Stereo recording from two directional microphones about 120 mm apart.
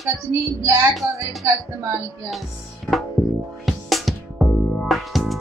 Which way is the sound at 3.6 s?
Centre (ahead or behind).